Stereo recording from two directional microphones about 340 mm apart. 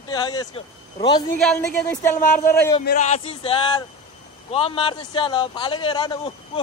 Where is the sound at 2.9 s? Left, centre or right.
Centre.